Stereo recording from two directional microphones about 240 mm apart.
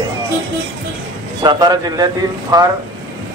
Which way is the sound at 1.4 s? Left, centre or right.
Centre.